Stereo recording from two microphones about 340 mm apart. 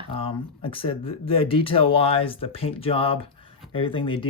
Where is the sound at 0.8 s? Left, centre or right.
Centre.